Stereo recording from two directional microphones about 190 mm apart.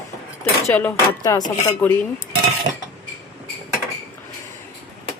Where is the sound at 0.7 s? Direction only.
10° left (ahead or behind).